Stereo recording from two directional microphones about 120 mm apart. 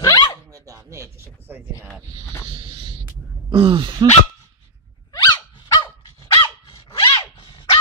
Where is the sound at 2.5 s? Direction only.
45° right (ahead or behind).